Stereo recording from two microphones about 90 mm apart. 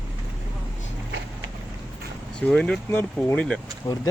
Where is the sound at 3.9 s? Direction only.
40° left (ahead or behind).